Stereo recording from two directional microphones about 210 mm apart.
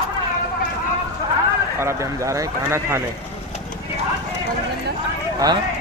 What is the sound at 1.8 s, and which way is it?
Speech, 15° right (ahead or behind).